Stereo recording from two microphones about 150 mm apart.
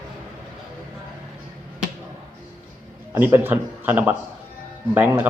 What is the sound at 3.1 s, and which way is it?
Speech, 15° right (ahead or behind).